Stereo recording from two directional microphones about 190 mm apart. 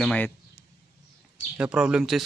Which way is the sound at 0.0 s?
5° left (ahead or behind).